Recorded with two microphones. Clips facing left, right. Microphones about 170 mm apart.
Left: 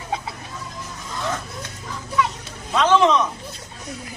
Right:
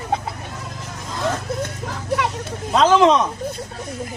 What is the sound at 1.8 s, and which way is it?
Children playing, 70° right (ahead or behind).